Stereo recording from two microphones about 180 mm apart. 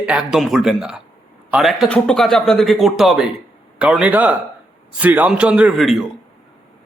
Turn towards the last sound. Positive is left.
turn(degrees=0)  # may be behind; listen again after turning